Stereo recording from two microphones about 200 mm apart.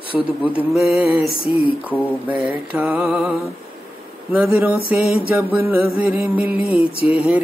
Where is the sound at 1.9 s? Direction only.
5° right (ahead or behind).